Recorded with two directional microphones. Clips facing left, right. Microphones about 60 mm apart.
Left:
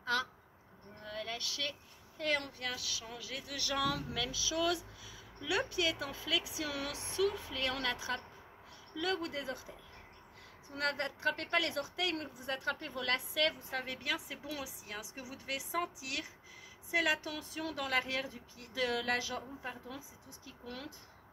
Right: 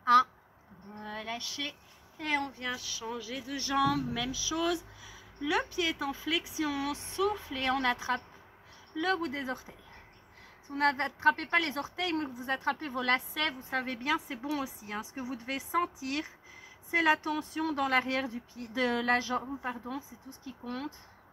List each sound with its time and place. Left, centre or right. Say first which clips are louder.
0.0 s livestock: right 12 dB; right
1.0 s a woman's voice: right 3 dB; right
10.7 s a woman's voice: right 7 dB; right